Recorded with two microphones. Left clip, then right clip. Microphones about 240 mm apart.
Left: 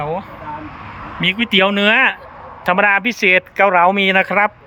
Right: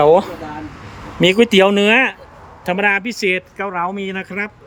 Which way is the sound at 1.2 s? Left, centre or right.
Right.